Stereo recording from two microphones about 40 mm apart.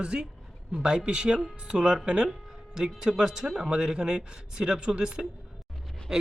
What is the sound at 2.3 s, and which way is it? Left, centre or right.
A man's voice, centre.